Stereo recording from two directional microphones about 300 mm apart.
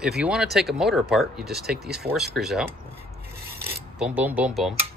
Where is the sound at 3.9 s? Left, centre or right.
Centre.